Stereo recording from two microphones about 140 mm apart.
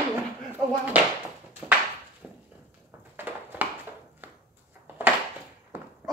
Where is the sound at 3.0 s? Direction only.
15° right (ahead or behind).